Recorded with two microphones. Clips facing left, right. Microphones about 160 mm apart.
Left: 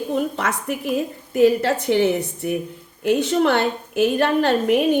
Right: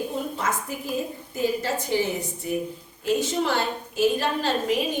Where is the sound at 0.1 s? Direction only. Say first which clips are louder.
Left 5 dB; 70° left (ahead or behind).